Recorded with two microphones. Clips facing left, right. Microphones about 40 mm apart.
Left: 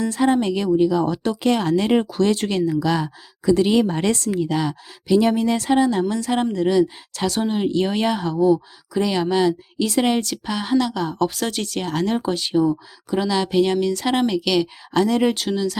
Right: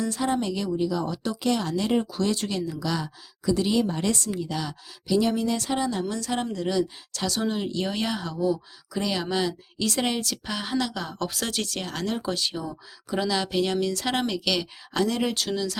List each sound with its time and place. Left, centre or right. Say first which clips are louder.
0.0 s speech: left 7 dB; left
4.5 s speech: left 9 dB; left
8.9 s speech: left 7 dB; centre
10.2 s speech: left 6 dB; centre
12.0 s speech: left 5 dB; left
12.3 s speech: left 10 dB; centre